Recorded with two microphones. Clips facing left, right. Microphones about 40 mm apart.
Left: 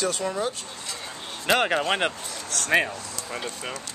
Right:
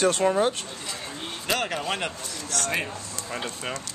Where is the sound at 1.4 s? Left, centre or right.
Left.